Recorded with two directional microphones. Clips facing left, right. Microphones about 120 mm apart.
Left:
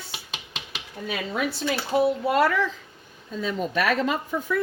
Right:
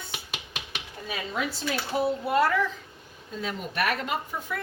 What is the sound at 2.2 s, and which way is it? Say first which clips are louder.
Speech: left 2 dB; 90° left.